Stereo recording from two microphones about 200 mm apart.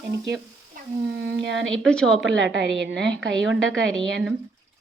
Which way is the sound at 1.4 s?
65° right (ahead or behind).